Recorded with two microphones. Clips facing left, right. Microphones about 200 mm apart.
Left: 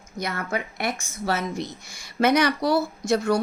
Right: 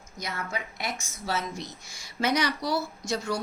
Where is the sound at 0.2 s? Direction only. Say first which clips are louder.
Left 6 dB; 60° left (ahead or behind).